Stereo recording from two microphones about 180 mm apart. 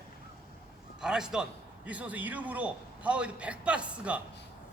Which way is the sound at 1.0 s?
5° right (ahead or behind).